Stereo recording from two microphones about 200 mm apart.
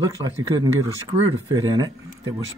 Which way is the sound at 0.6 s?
20° right (ahead or behind).